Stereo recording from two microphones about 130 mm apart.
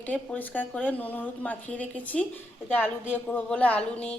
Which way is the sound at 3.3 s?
10° left (ahead or behind).